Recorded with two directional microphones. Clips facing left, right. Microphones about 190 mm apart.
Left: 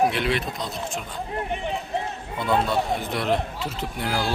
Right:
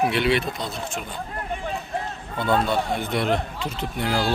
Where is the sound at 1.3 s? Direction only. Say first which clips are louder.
Left 3 dB; 20° left (ahead or behind).